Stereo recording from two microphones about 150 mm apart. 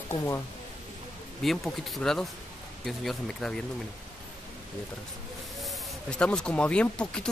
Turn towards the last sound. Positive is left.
turn(degrees=5)  # may be behind; listen again after turning